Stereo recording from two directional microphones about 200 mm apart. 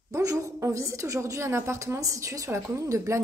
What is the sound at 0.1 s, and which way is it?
A woman's voice, 15° right (ahead or behind).